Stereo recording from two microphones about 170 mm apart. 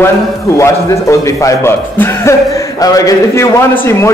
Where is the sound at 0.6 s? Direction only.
20° left (ahead or behind).